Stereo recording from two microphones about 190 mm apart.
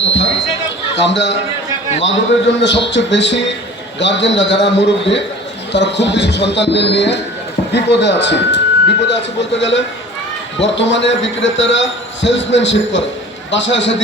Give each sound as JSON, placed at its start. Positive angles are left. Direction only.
{"t": 0.0, "sound": "basketball bounce", "side_deg": 70}
{"t": 0.9, "sound": "a man's voice", "side_deg": 70}